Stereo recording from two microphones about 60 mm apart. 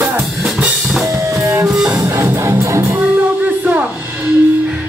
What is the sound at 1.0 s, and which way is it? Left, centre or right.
Drum kit, right.